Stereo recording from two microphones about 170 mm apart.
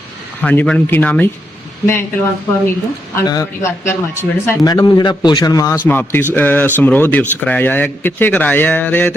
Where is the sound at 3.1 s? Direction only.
20° left (ahead or behind).